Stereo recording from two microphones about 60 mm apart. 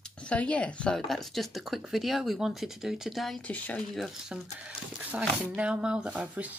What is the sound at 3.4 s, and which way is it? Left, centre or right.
Speech, left.